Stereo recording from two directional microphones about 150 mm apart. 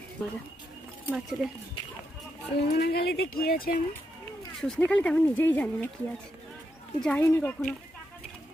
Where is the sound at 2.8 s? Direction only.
90° left.